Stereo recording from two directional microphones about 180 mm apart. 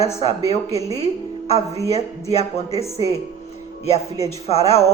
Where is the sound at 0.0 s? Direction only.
35° left (ahead or behind).